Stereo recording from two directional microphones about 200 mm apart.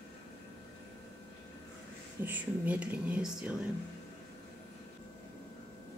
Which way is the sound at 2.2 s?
10° right (ahead or behind).